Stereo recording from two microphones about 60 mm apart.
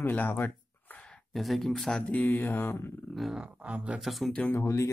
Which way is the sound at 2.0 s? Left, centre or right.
Left.